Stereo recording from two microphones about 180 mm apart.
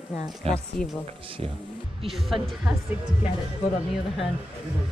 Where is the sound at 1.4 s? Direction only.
35° right (ahead or behind).